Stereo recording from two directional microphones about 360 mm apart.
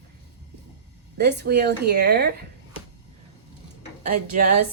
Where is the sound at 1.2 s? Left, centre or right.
Right.